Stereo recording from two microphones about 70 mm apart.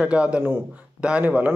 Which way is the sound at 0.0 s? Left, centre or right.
Centre.